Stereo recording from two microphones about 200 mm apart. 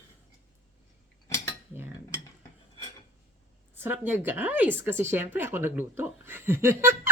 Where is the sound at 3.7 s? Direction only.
10° right (ahead or behind).